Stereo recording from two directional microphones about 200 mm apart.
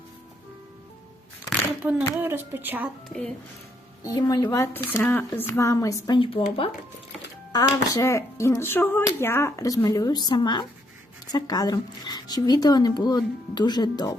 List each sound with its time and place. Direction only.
1.5 s speech: 5° right (ahead or behind)
3.1 s a child's voice: 5° left (ahead or behind)
4.0 s speech: 20° left (ahead or behind)
7.5 s speech: 15° left (ahead or behind)